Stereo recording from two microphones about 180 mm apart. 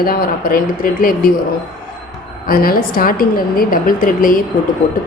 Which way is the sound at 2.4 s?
55° left (ahead or behind).